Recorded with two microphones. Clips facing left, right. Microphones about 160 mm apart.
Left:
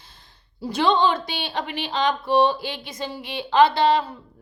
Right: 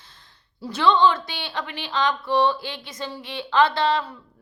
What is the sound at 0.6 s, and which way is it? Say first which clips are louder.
A woman's voice: right 1 dB; 15° left (ahead or behind).